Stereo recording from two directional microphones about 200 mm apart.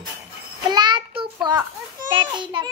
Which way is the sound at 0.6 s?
20° right (ahead or behind).